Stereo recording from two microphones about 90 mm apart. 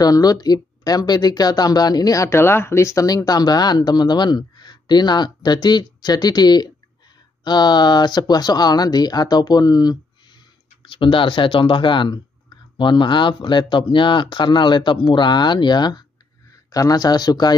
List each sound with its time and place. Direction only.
0.0 s speech: 45° left (ahead or behind)
2.2 s speech: 30° left (ahead or behind); by 9.9 s 45° left (ahead or behind)
10.9 s speech: 70° left (ahead or behind); by 16.0 s 55° left (ahead or behind)
16.7 s speech: 45° left (ahead or behind)